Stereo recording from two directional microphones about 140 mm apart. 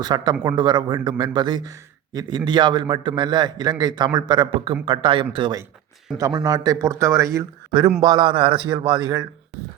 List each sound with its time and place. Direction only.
0.0 s a man's voice: 30° right (ahead or behind)
6.1 s a man's voice: 25° right (ahead or behind)